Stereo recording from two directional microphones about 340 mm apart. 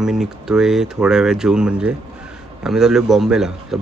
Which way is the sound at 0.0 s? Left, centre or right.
Centre.